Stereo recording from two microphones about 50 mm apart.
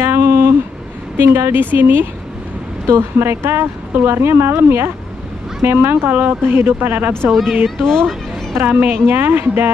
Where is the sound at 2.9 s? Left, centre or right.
Right.